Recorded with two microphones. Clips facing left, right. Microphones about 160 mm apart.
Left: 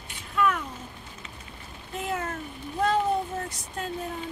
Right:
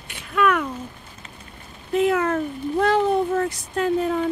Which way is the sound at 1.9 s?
75° right (ahead or behind).